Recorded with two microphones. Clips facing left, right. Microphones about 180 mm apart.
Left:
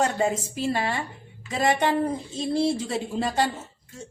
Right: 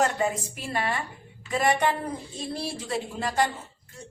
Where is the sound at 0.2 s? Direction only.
25° left (ahead or behind).